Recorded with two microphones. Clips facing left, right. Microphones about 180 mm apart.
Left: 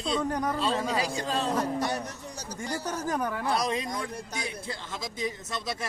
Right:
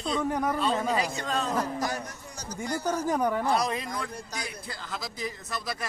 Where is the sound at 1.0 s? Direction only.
30° left (ahead or behind).